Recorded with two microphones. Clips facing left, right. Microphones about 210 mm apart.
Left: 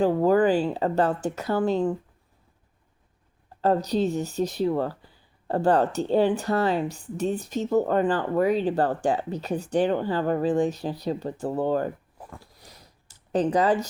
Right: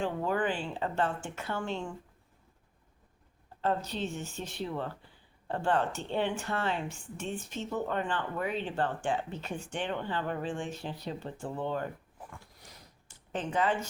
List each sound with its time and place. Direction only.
0.0 s speech: 40° left (ahead or behind)
3.6 s speech: 40° left (ahead or behind)
12.3 s a sound: 35° left (ahead or behind)